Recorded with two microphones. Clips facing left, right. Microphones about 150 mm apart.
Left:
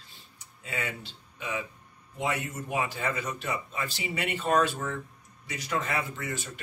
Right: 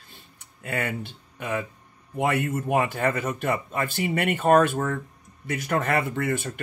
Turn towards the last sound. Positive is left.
turn(degrees=-60)  # may be behind; listen again after turning